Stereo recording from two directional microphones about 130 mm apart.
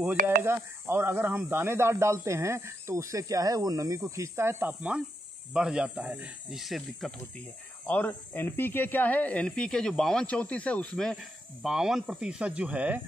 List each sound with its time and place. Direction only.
0.4 s speech: 20° right (ahead or behind); by 7.2 s centre (ahead or behind)
7.8 s speech: 10° left (ahead or behind); by 13.0 s 10° right (ahead or behind)